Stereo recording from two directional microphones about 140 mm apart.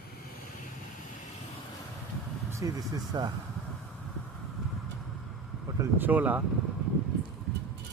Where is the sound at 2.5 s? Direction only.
20° right (ahead or behind).